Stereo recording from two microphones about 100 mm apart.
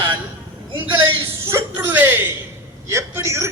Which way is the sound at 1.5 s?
30° right (ahead or behind).